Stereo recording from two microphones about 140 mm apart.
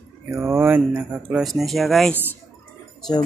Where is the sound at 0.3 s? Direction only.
20° right (ahead or behind); by 2.1 s centre (ahead or behind).